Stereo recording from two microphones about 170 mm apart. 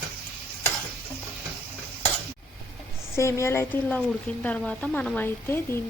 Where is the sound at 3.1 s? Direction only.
15° left (ahead or behind).